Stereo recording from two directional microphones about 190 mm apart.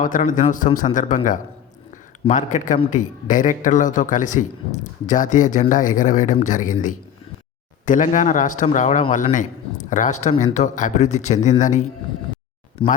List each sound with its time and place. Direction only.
0.0 s a man's voice: 45° left (ahead or behind)
12.8 s speech: 30° left (ahead or behind)